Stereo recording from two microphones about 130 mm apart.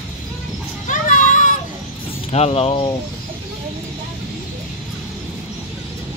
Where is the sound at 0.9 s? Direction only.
80° left.